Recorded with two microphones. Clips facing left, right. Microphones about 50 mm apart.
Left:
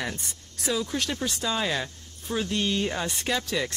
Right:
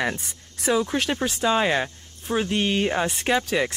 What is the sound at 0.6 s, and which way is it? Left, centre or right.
Speech, right.